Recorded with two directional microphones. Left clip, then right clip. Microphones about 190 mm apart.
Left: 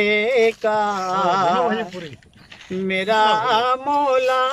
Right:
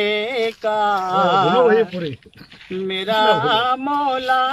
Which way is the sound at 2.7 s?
Centre (ahead or behind).